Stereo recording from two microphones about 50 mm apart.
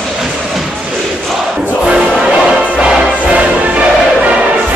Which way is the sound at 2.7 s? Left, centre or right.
Centre.